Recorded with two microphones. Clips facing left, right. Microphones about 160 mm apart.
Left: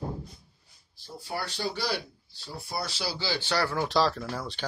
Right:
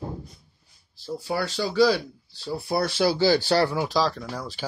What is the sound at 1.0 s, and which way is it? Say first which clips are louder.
Speech: right 8 dB; 90° right.